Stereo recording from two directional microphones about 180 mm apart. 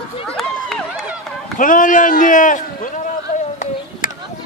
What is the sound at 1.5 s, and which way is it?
Run, 50° left (ahead or behind).